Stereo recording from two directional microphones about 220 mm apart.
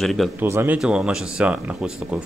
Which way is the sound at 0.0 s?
Centre (ahead or behind).